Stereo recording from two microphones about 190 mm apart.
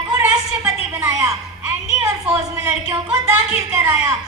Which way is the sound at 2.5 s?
20° right (ahead or behind).